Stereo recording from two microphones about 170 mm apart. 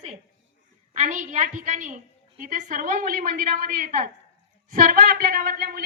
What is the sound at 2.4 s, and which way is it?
A woman's voice, 50° right (ahead or behind).